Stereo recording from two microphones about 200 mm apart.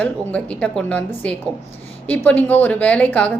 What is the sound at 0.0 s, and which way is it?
A woman's voice, 5° left (ahead or behind).